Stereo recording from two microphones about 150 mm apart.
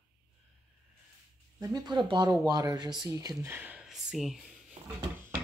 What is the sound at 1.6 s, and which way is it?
Speech, 25° right (ahead or behind).